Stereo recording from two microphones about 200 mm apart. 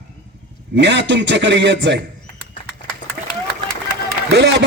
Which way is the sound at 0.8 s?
60° right (ahead or behind).